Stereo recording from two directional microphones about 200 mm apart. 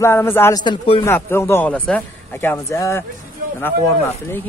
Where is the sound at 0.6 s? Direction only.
25° left (ahead or behind).